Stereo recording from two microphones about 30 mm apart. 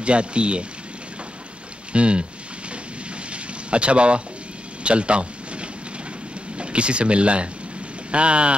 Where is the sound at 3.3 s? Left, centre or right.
Right.